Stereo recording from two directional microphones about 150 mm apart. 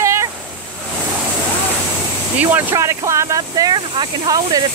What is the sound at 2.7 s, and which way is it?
Speech, 20° right (ahead or behind).